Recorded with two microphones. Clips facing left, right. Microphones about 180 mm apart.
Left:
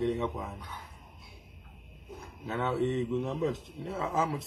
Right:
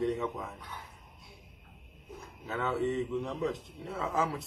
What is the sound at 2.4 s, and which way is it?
A man's voice, centre (ahead or behind).